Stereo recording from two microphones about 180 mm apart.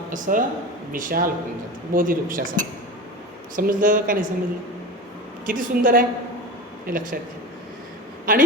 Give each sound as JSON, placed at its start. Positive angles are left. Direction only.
{"t": 0.1, "sound": "a woman's voice", "side_deg": -45}
{"t": 5.5, "sound": "speech", "side_deg": -50}
{"t": 8.3, "sound": "speech", "side_deg": -50}